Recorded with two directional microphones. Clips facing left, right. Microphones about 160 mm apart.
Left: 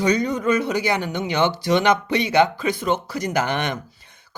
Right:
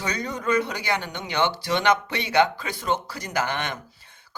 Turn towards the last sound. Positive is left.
turn(degrees=15)  # may be behind; listen again after turning